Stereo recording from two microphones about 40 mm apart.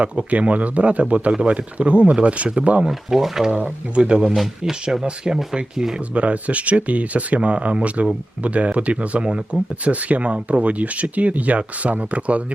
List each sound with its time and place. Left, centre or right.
0.0 s speech: right
2.8 s speech: centre
3.9 s speech: right
4.3 s speech: centre
5.0 s speech: right
6.1 s speech: right